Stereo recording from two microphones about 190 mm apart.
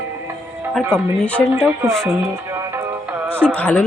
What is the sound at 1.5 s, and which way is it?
Speech, 15° right (ahead or behind).